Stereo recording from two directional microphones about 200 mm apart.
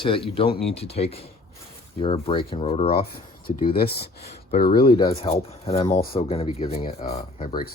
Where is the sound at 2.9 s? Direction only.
50° left (ahead or behind).